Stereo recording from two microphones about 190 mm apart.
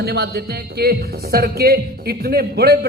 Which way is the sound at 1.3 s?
55° right (ahead or behind).